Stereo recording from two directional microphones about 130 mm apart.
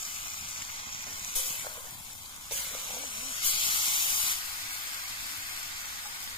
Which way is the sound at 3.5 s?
40° left (ahead or behind).